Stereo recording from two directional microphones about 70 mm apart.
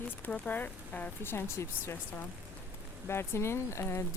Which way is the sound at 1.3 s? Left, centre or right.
Left.